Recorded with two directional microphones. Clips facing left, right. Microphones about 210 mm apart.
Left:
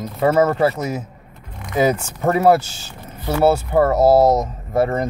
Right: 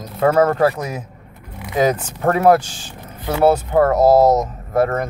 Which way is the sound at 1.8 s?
10° left (ahead or behind).